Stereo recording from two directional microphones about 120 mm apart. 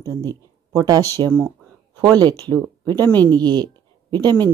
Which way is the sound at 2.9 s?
15° left (ahead or behind).